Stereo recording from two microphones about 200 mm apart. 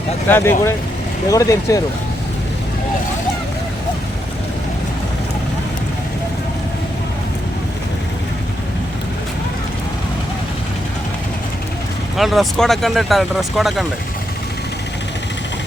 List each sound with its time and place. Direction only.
0.3 s speech: 10° left (ahead or behind)
12.1 s speech: centre (ahead or behind)